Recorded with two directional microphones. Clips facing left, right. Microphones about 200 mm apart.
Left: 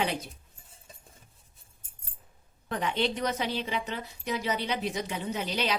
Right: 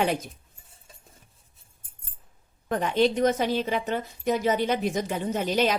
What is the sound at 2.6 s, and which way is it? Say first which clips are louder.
A woman's voice: right 7 dB; 45° right (ahead or behind).